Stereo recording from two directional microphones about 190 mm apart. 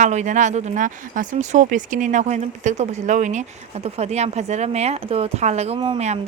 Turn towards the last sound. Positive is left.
turn(degrees=-30)  # may be behind; listen again after turning